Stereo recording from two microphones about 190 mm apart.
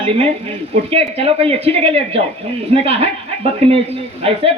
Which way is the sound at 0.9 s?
30° right (ahead or behind).